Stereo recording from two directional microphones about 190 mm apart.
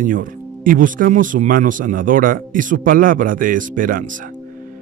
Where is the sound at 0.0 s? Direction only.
45° right (ahead or behind).